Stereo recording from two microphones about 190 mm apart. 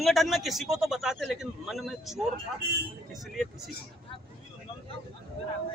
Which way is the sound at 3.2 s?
Centre (ahead or behind).